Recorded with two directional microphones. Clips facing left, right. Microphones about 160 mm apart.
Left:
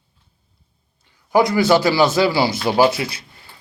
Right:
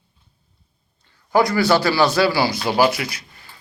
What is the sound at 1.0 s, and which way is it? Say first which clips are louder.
Speech: left 1 dB; 15° left (ahead or behind).